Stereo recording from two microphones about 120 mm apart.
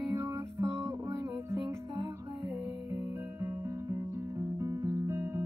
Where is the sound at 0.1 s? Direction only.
25° right (ahead or behind).